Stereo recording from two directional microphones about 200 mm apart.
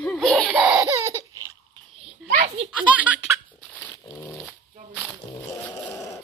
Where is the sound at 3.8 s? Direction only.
15° left (ahead or behind).